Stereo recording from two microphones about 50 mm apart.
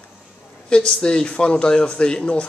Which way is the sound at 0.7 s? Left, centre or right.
Left.